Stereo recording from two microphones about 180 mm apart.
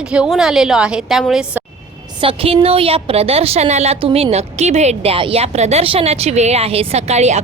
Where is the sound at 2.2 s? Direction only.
30° right (ahead or behind).